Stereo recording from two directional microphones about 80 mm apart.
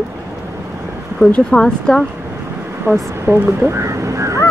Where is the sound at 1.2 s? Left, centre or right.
Centre.